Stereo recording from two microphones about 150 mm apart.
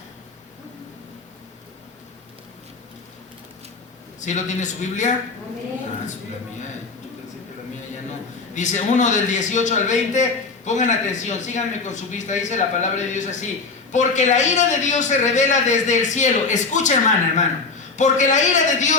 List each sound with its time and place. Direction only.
4.2 s a man's voice: 55° left (ahead or behind)
8.5 s a man's voice: 55° left (ahead or behind)